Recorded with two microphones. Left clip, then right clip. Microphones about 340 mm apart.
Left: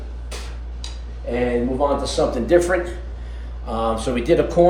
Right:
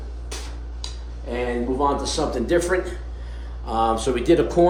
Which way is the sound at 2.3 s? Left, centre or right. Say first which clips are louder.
Left 4 dB; centre.